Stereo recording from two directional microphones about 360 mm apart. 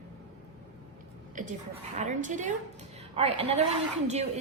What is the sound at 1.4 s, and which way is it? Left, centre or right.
A woman's voice, right.